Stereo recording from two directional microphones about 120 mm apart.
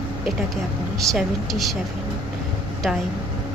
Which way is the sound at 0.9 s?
5° left (ahead or behind).